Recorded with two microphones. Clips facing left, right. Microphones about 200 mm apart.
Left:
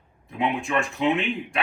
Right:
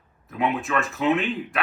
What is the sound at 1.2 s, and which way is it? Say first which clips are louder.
Speech: right 1 dB; 30° left (ahead or behind).